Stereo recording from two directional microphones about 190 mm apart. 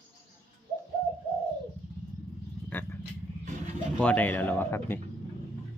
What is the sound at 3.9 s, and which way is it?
A man's voice, 5° left (ahead or behind).